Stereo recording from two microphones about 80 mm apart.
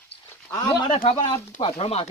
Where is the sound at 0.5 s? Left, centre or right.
Left.